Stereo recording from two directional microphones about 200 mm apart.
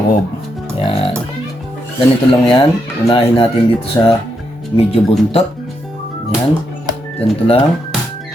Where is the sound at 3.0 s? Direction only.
25° left (ahead or behind).